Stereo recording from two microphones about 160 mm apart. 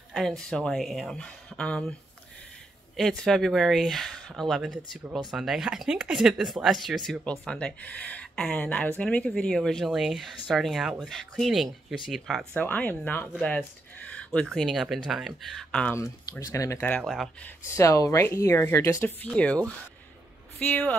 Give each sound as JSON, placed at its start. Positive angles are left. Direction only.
{"t": 0.1, "sound": "speech", "side_deg": 0}
{"t": 3.0, "sound": "speech", "side_deg": 0}
{"t": 12.5, "sound": "speech", "side_deg": 10}
{"t": 16.0, "sound": "speech", "side_deg": 20}
{"t": 16.9, "sound": "speech", "side_deg": 0}
{"t": 17.6, "sound": "speech", "side_deg": 20}